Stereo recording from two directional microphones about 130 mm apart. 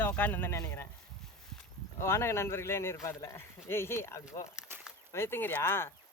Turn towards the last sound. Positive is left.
turn(degrees=20)  # may be behind; listen again after turning